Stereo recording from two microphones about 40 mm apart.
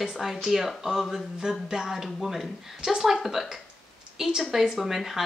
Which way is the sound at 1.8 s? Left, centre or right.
Centre.